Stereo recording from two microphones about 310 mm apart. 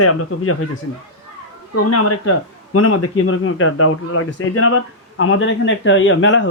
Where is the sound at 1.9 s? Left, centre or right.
Left.